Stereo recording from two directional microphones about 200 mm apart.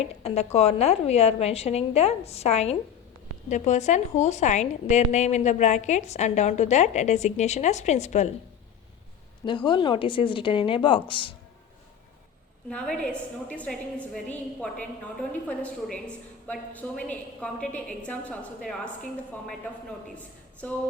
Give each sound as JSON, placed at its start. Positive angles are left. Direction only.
{"t": 0.0, "sound": "a woman's voice", "side_deg": 30}
{"t": 9.6, "sound": "a woman's voice", "side_deg": 25}
{"t": 12.7, "sound": "a woman's voice", "side_deg": 5}
{"t": 20.6, "sound": "music", "side_deg": 10}